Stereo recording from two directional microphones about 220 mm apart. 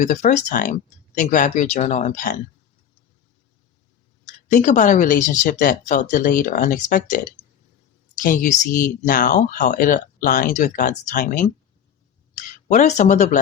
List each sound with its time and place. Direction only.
0.0 s speech: 35° left (ahead or behind)
4.4 s speech: 35° left (ahead or behind)
8.2 s speech: 40° left (ahead or behind)